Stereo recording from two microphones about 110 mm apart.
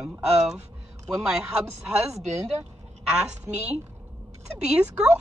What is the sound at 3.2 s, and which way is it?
Speech, 10° right (ahead or behind).